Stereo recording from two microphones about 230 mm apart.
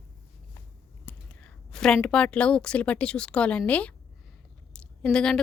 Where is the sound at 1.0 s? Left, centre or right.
Centre.